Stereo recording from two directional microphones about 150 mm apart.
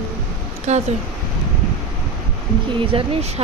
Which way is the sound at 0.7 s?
50° right (ahead or behind).